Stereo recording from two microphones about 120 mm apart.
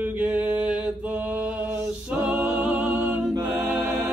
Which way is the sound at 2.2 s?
10° right (ahead or behind).